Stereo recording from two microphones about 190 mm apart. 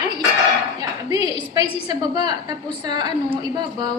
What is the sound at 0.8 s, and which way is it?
A woman's voice, 20° right (ahead or behind).